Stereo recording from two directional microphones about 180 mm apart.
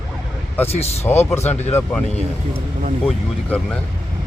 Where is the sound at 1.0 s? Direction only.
15° left (ahead or behind).